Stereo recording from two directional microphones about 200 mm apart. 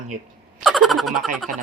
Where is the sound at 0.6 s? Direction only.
Centre (ahead or behind).